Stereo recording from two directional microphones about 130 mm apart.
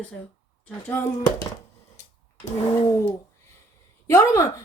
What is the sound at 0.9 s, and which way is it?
Speech, 20° left (ahead or behind).